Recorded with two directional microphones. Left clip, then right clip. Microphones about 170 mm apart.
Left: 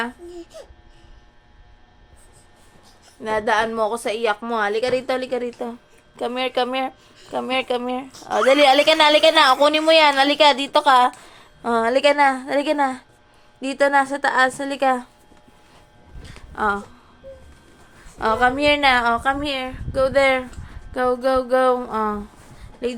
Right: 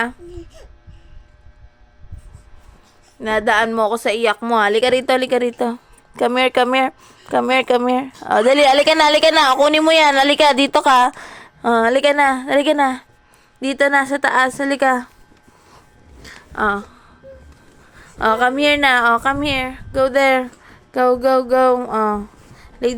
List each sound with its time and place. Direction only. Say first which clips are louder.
0.5 s speech: left 5 dB; 15° left (ahead or behind)
3.2 s a woman's voice: right 4 dB; 45° right (ahead or behind); by 15.1 s 25° right (ahead or behind)
16.2 s a sound: right 6 dB; 40° right (ahead or behind)
16.6 s a woman's voice: right 3 dB; 25° right (ahead or behind)
18.2 s a woman's voice: right 3 dB; 30° right (ahead or behind)